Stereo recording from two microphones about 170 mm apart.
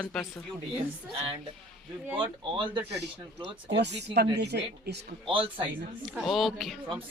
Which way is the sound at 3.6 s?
85° right.